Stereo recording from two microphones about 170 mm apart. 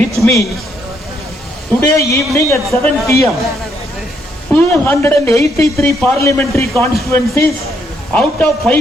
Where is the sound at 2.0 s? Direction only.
20° left (ahead or behind).